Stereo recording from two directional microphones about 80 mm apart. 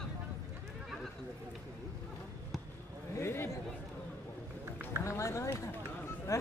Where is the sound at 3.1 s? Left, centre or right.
Left.